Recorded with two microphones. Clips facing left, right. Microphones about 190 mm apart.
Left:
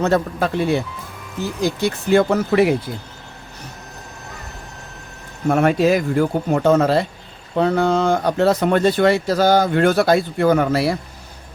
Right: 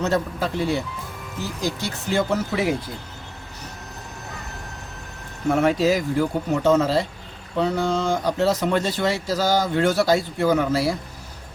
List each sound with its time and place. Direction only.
0.0 s speech: 55° left (ahead or behind)
5.5 s speech: 55° left (ahead or behind)